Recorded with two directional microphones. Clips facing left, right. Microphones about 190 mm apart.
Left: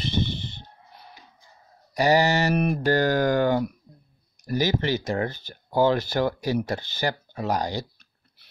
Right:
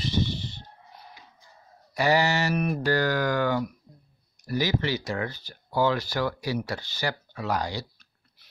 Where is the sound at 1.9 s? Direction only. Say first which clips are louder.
Left 3 dB; 40° left (ahead or behind).